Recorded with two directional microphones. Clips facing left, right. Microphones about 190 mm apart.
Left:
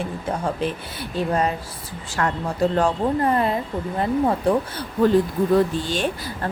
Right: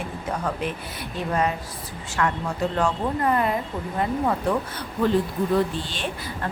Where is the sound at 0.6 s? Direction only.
30° left (ahead or behind).